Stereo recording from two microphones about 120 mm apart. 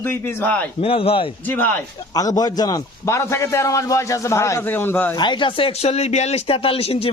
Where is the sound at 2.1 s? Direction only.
30° left (ahead or behind).